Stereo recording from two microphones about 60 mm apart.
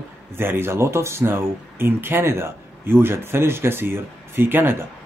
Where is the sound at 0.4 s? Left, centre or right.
Right.